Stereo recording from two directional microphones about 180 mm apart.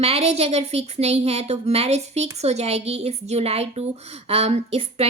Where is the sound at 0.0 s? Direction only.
35° right (ahead or behind).